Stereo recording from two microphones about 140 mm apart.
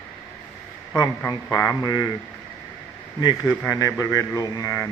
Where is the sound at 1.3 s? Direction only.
25° left (ahead or behind).